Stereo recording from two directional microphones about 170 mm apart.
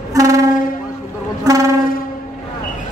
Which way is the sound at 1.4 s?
20° right (ahead or behind).